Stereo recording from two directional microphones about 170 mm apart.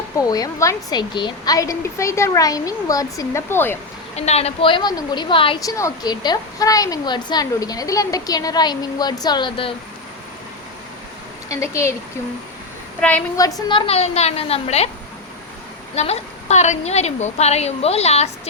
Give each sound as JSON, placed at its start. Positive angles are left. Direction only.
{"t": 0.2, "sound": "a woman's voice", "side_deg": 20}
{"t": 4.1, "sound": "a woman's voice", "side_deg": 40}
{"t": 5.5, "sound": "a woman's voice", "side_deg": 20}
{"t": 11.4, "sound": "a woman's voice", "side_deg": 20}
{"t": 13.0, "sound": "a woman's voice", "side_deg": 10}
{"t": 13.3, "sound": "a woman's voice", "side_deg": 20}
{"t": 16.0, "sound": "a woman's voice", "side_deg": 40}